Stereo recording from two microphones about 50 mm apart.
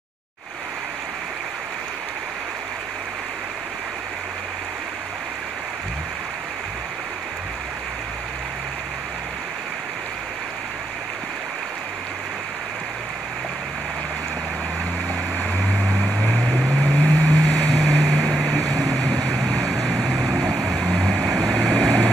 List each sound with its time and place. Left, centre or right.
16.7 s boat: left
17.9 s a sound: centre
19.7 s vehicle: right
21.4 s vehicle: centre